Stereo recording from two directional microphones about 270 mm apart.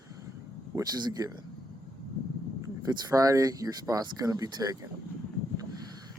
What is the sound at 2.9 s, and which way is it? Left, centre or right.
Speech, centre.